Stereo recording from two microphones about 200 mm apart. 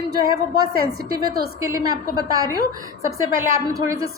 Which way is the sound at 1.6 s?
15° right (ahead or behind).